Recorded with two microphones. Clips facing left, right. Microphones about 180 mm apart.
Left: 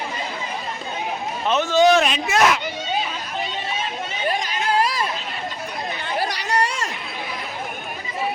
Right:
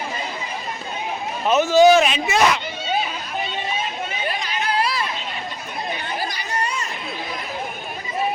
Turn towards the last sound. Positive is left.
turn(degrees=90)